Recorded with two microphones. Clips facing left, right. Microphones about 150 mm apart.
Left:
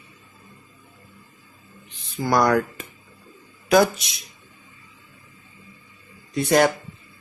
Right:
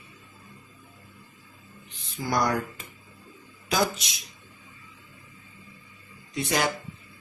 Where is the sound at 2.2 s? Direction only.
65° left (ahead or behind).